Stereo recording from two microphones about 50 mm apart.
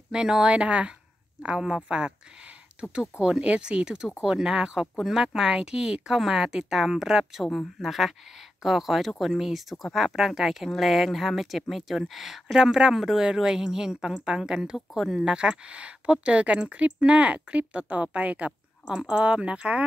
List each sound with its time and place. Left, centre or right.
0.1 s speech: centre